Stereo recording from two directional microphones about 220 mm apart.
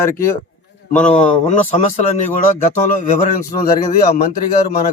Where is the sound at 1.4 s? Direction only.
30° left (ahead or behind).